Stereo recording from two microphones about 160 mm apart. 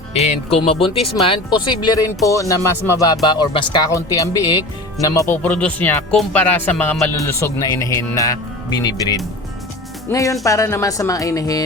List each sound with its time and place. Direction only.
0.1 s speech: 40° left (ahead or behind); by 11.6 s 20° left (ahead or behind)